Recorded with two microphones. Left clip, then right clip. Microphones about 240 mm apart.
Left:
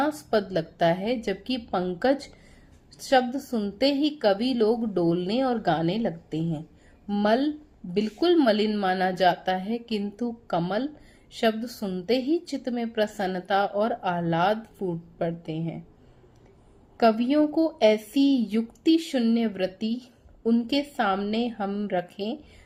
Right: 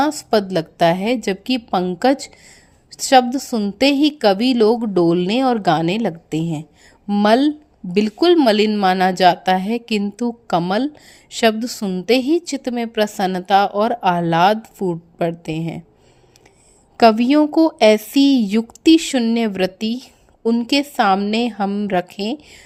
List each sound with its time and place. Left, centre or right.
0.0 s a woman's voice: right
17.0 s a woman's voice: right